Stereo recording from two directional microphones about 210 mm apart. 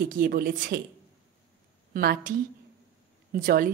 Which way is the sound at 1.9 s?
45° right (ahead or behind).